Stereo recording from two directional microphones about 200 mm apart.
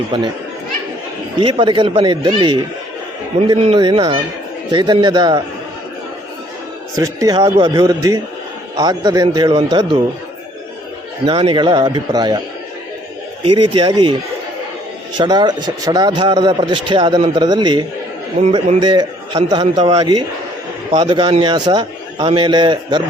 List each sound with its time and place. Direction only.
0.1 s speech: 25° right (ahead or behind)
1.4 s speech: 25° right (ahead or behind)
3.6 s speech: 25° right (ahead or behind)
6.9 s speech: 15° right (ahead or behind)
11.3 s speech: 25° right (ahead or behind)
13.4 s speech: 25° right (ahead or behind)
15.2 s speech: 20° right (ahead or behind)
18.3 s a man's voice: 30° right (ahead or behind)
18.8 s speech: 20° right (ahead or behind)
19.8 s speech: 30° right (ahead or behind)